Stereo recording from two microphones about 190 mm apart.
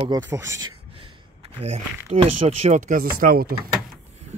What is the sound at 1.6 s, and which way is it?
Speech, 35° right (ahead or behind).